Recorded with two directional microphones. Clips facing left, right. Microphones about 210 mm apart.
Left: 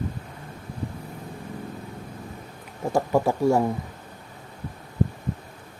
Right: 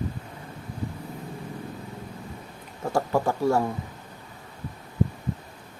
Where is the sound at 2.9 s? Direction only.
15° left (ahead or behind).